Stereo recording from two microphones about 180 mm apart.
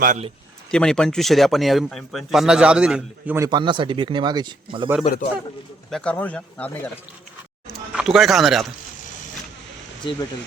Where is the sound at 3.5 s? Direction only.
25° right (ahead or behind).